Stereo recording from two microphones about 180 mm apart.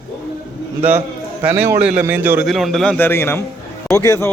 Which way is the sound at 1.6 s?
10° right (ahead or behind).